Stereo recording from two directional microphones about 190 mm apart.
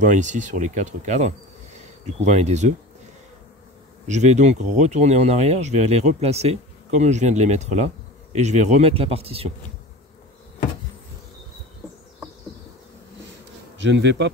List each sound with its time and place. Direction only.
0.0 s speech: 40° right (ahead or behind)
4.1 s speech: 35° right (ahead or behind)
13.8 s speech: 70° right (ahead or behind)